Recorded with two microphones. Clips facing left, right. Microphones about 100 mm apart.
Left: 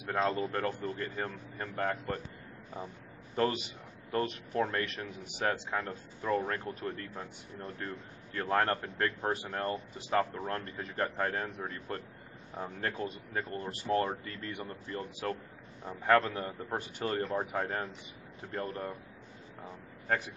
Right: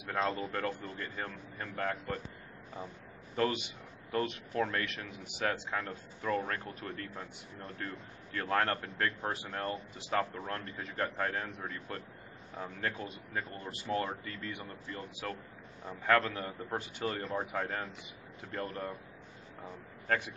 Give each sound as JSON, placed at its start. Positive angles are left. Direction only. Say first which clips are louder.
{"t": 0.1, "sound": "speech", "louder": "left 3 dB", "side_deg": 30}
{"t": 3.3, "sound": "a man's voice", "louder": "left 1 dB", "side_deg": 35}
{"t": 4.8, "sound": "speech", "louder": "left 2 dB", "side_deg": 40}
{"t": 5.7, "sound": "a man's voice", "louder": "left 2 dB", "side_deg": 20}